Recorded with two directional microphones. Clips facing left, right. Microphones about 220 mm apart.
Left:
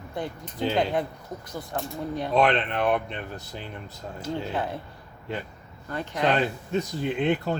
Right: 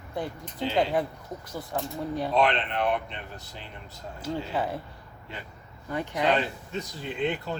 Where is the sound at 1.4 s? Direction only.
5° right (ahead or behind).